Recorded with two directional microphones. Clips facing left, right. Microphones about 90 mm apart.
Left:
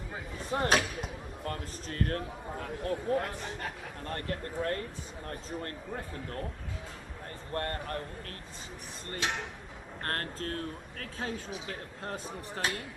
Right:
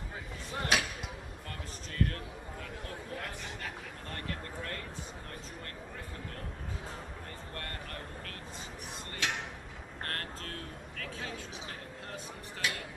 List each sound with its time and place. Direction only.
0.5 s a man's voice: 40° left (ahead or behind)
7.5 s a man's voice: 35° left (ahead or behind)
10.0 s a man's voice: 40° left (ahead or behind)